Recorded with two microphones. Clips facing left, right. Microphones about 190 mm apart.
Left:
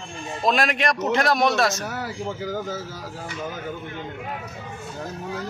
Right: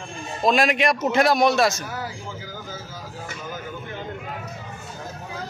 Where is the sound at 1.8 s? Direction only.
70° left (ahead or behind).